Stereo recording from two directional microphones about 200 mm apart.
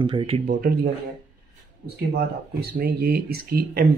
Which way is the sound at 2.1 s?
50° right (ahead or behind).